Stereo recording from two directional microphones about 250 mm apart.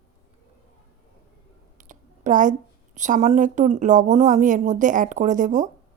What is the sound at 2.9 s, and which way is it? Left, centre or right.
A woman's voice, right.